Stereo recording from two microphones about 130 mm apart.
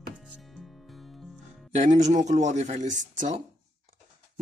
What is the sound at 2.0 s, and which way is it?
Speech, 65° right (ahead or behind).